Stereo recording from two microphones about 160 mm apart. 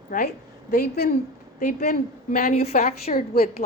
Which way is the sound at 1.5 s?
50° left (ahead or behind).